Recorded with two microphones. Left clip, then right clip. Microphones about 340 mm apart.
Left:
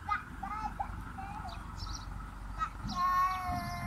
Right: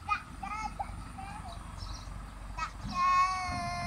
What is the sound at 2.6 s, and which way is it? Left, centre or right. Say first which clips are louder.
Child singing: right 2 dB; centre.